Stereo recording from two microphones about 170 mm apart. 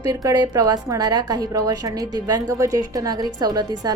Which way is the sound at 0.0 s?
20° right (ahead or behind).